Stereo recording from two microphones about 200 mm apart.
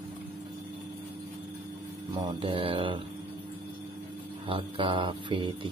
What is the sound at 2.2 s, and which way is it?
Speech, 25° right (ahead or behind).